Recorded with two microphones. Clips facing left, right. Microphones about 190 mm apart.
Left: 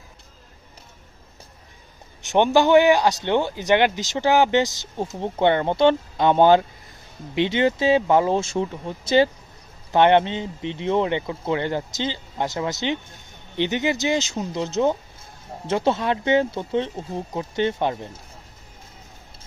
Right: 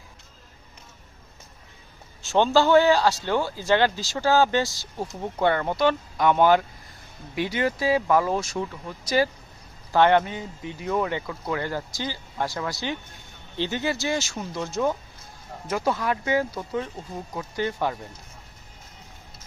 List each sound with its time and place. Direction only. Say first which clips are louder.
2.2 s speech: left 2 dB; 15° left (ahead or behind)